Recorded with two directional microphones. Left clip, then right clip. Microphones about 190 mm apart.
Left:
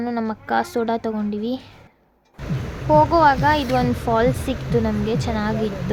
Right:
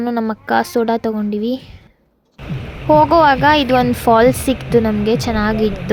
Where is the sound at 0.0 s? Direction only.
40° right (ahead or behind).